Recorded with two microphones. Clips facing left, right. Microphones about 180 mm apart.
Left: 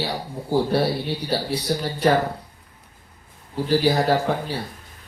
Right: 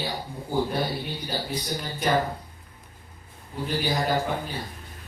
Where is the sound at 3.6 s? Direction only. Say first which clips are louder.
Left 7 dB; 85° left.